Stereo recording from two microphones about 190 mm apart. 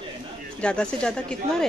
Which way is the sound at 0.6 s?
5° left (ahead or behind).